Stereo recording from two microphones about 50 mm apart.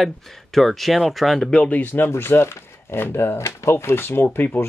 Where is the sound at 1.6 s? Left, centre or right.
Left.